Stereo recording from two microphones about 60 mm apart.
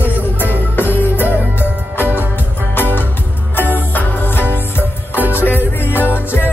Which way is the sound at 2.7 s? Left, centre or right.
Left.